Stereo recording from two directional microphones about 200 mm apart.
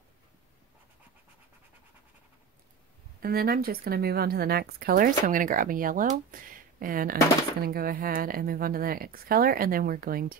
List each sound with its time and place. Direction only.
3.2 s a woman's voice: 50° right (ahead or behind)